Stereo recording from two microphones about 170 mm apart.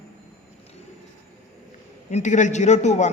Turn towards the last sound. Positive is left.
turn(degrees=40)  # may be behind; listen again after turning